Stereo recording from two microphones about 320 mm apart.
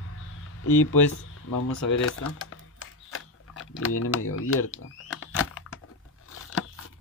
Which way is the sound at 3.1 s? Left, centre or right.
Left.